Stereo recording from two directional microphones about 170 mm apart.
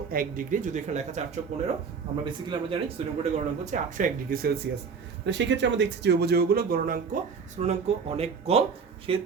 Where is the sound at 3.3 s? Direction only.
45° right (ahead or behind).